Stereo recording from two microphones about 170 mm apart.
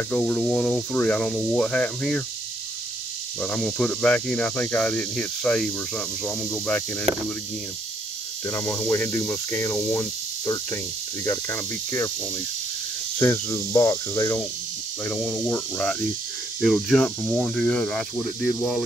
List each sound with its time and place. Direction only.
0.1 s speech: 5° left (ahead or behind)
3.3 s speech: 5° left (ahead or behind)
8.5 s cricket: 15° left (ahead or behind)
9.9 s speech: 15° left (ahead or behind)
11.2 s cricket: 15° left (ahead or behind)
13.2 s cricket: 15° left (ahead or behind)
15.5 s speech: 5° left (ahead or behind)